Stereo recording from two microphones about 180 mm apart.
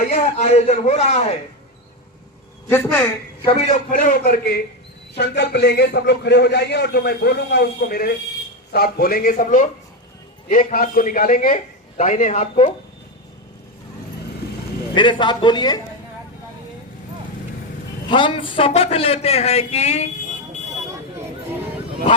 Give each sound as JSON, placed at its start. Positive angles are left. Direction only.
{"t": 0.0, "sound": "speech", "side_deg": 40}
{"t": 2.6, "sound": "a man's voice", "side_deg": 10}
{"t": 3.4, "sound": "a man's voice", "side_deg": 35}
{"t": 5.1, "sound": "a man's voice", "side_deg": 70}
{"t": 14.9, "sound": "a man's voice", "side_deg": 25}
{"t": 18.1, "sound": "speech", "side_deg": 25}